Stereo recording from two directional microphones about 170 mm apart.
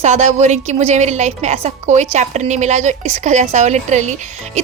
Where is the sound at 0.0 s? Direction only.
45° right (ahead or behind).